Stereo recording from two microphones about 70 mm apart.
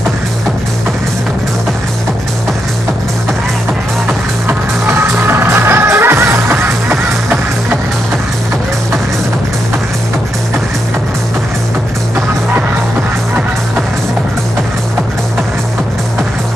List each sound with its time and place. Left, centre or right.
5.0 s music: right